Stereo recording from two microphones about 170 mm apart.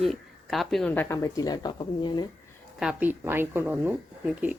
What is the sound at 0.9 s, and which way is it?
Speech, 10° left (ahead or behind).